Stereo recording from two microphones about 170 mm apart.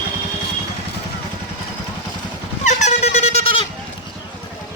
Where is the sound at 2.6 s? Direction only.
40° left (ahead or behind).